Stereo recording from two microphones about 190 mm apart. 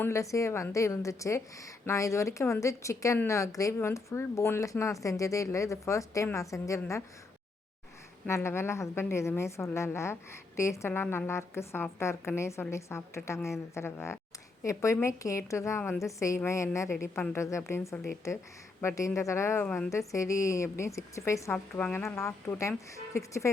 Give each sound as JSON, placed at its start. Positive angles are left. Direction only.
{"t": 0.0, "sound": "a woman's voice", "side_deg": 15}
{"t": 8.3, "sound": "a woman's voice", "side_deg": 15}